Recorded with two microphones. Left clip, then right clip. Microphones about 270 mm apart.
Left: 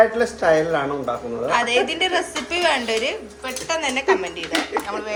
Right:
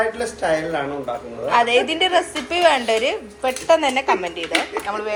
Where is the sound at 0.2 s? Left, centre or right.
Left.